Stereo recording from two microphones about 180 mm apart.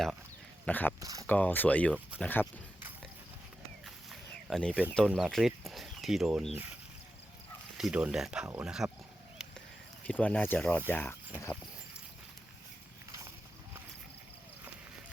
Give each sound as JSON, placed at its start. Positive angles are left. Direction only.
{"t": 0.6, "sound": "speech", "side_deg": 10}
{"t": 0.9, "sound": "speech", "side_deg": -20}
{"t": 1.3, "sound": "speech", "side_deg": 10}
{"t": 1.9, "sound": "speech", "side_deg": -5}
{"t": 2.2, "sound": "speech", "side_deg": 10}
{"t": 3.8, "sound": "a sound", "side_deg": 0}
{"t": 4.9, "sound": "speech", "side_deg": 5}
{"t": 7.8, "sound": "speech", "side_deg": -5}
{"t": 9.4, "sound": "a sound", "side_deg": -5}
{"t": 10.1, "sound": "speech", "side_deg": 10}